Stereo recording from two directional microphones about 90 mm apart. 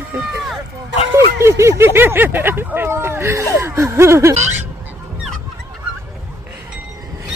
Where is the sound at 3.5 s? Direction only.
35° right (ahead or behind).